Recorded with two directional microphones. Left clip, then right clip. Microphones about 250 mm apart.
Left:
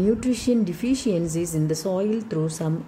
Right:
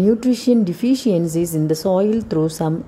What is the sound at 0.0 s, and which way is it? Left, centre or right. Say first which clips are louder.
A woman's voice: right 6 dB; centre.